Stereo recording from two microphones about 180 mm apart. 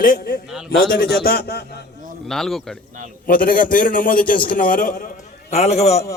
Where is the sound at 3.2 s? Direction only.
50° left (ahead or behind).